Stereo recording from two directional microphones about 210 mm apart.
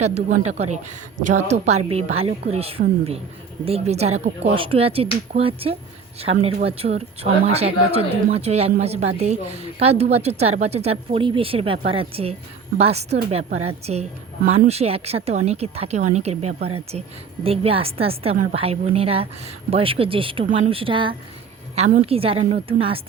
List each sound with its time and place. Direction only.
0.0 s a woman's voice: 35° right (ahead or behind)
21.8 s speech: 35° right (ahead or behind)